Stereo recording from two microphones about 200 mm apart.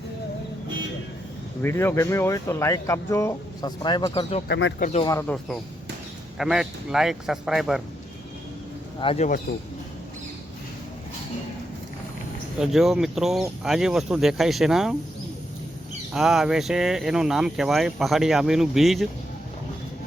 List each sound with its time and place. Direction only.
1.6 s speech: 10° left (ahead or behind); by 4.4 s 30° left (ahead or behind)
4.4 s speech: 60° left (ahead or behind)
4.8 s speech: 35° left (ahead or behind)
6.3 s speech: centre (ahead or behind)
9.0 s speech: 30° left (ahead or behind)
12.5 s speech: centre (ahead or behind)
16.1 s speech: centre (ahead or behind)